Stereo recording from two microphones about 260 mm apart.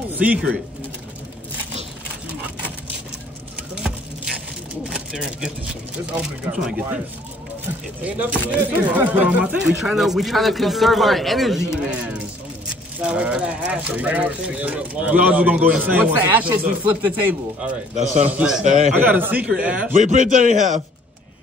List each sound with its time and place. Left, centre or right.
0.1 s pigeon: centre
4.8 s a sound: centre
6.5 s speech: centre
8.0 s speech: centre
18.6 s a man's voice: right
18.9 s speech: centre
19.9 s a man's voice: right